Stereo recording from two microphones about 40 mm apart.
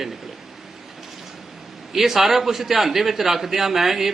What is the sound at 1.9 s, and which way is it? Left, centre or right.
A man's voice, centre.